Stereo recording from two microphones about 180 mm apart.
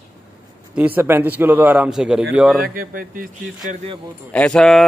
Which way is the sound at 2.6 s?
55° right (ahead or behind).